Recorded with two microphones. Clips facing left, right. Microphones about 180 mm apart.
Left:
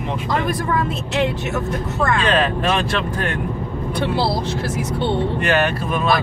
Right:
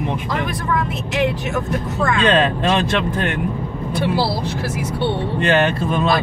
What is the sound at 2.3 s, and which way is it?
Speech, 25° right (ahead or behind).